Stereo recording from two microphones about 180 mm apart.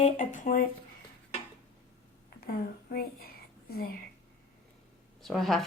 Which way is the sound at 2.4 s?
55° left (ahead or behind).